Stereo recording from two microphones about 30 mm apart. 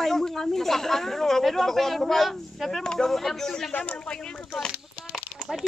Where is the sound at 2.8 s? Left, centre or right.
Left.